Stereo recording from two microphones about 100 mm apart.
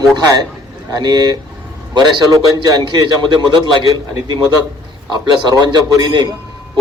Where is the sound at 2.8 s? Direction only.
45° right (ahead or behind).